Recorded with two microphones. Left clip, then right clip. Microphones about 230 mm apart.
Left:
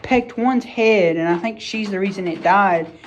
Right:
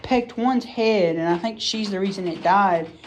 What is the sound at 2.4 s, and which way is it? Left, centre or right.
Speech, right.